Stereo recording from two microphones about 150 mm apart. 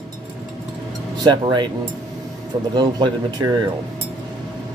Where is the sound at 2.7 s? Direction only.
30° right (ahead or behind).